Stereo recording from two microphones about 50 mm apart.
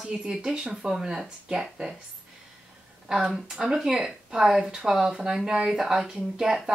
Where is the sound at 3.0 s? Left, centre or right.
Centre.